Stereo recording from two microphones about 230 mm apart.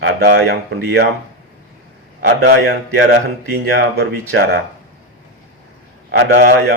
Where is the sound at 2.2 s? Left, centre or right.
Right.